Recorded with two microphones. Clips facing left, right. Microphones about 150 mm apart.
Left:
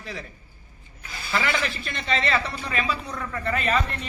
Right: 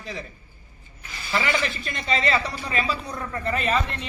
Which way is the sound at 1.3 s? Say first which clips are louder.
Right 1 dB; centre (ahead or behind).